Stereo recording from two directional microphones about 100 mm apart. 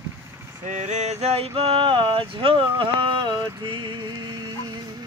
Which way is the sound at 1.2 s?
85° right.